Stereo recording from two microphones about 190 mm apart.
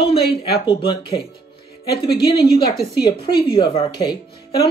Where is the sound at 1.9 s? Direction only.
55° left (ahead or behind).